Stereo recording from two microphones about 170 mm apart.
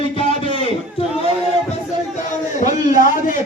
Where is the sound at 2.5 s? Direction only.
50° left (ahead or behind).